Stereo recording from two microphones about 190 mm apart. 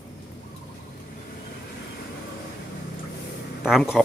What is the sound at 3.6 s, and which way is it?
Speech, centre (ahead or behind).